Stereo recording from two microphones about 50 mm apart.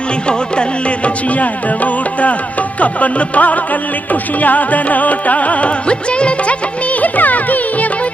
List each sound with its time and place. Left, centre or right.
0.3 s music: left